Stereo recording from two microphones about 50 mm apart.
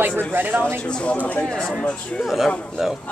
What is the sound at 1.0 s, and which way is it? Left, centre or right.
Speech, left.